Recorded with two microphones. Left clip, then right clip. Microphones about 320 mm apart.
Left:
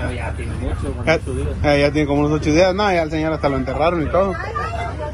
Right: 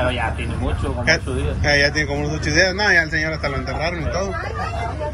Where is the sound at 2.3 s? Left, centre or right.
Left.